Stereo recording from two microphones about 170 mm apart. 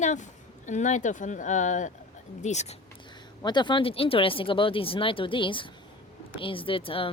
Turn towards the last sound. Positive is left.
turn(degrees=30)  # may be behind; listen again after turning